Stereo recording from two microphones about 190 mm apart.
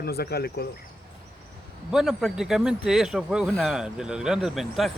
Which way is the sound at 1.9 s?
Centre (ahead or behind).